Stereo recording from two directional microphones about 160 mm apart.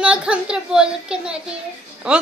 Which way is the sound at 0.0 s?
5° right (ahead or behind).